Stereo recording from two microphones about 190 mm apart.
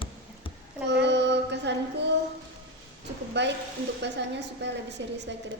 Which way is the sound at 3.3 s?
65° right (ahead or behind).